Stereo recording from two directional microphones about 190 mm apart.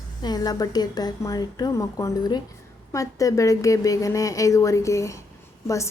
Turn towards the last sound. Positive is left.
turn(degrees=15)  # may be behind; listen again after turning